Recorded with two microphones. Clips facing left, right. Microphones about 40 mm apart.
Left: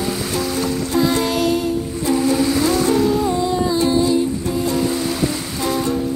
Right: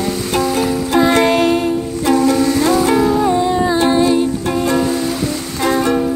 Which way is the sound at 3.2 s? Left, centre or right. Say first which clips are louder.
Right 4 dB; right.